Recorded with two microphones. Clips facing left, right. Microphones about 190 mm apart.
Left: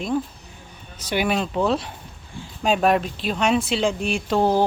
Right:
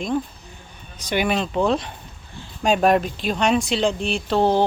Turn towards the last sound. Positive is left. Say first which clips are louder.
# right 1 dB
turn(degrees=5)  # may be behind; listen again after turning